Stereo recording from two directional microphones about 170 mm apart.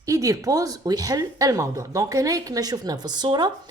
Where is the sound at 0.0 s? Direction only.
20° right (ahead or behind).